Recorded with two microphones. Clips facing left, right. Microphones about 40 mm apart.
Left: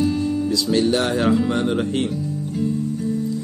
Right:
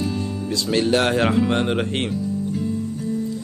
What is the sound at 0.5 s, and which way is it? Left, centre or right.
Speech, right.